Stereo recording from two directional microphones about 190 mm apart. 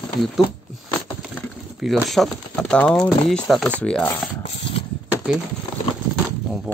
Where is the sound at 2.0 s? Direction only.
Centre (ahead or behind).